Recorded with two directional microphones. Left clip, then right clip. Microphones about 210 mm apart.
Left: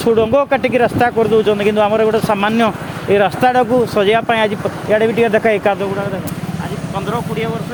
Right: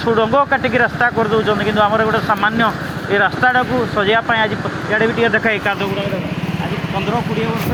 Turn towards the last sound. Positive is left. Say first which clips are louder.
# left 3 dB
turn(degrees=55)  # may be behind; listen again after turning